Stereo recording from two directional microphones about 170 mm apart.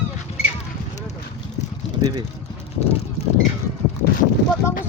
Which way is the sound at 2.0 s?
25° right (ahead or behind).